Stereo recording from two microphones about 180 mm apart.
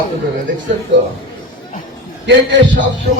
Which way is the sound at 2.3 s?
90° right.